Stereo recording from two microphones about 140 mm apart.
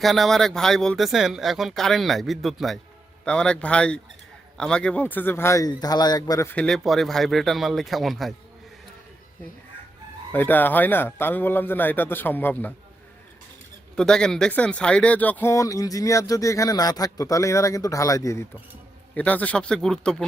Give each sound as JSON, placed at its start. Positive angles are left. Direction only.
{"t": 0.0, "sound": "a man's voice", "side_deg": 0}
{"t": 6.5, "sound": "speech", "side_deg": 5}
{"t": 10.3, "sound": "a man's voice", "side_deg": 15}
{"t": 13.9, "sound": "speech", "side_deg": 5}
{"t": 19.1, "sound": "a man's voice", "side_deg": 10}